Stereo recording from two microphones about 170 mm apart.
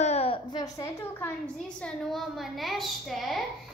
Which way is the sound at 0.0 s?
35° left (ahead or behind).